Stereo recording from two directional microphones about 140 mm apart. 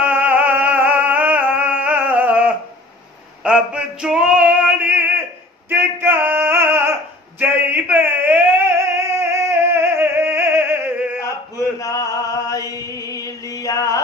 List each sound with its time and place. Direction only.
0.0 s music: 10° right (ahead or behind)
3.4 s male singing: 5° right (ahead or behind)
5.7 s singing: 15° right (ahead or behind)
11.5 s chant: 25° left (ahead or behind)